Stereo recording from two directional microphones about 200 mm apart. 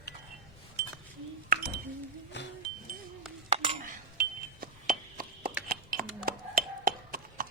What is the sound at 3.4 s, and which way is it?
Chink, 30° right (ahead or behind).